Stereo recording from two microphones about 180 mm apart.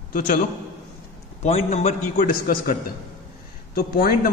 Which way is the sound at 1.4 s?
35° left (ahead or behind).